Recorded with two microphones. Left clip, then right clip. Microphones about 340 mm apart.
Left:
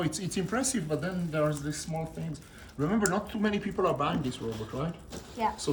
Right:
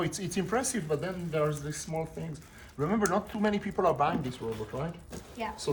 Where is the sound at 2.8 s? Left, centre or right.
Centre.